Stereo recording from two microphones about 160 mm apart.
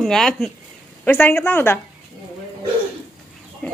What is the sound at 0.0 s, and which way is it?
Speech, 5° left (ahead or behind).